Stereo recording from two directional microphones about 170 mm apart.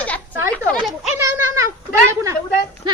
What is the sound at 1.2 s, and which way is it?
Speech, 20° right (ahead or behind).